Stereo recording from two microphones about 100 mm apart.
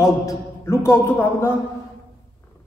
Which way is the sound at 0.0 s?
30° left (ahead or behind).